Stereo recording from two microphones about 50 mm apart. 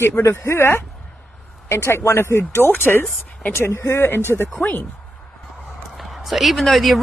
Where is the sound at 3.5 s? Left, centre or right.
Left.